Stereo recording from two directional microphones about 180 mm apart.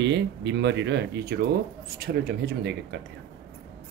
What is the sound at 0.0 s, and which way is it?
Speech, 80° right.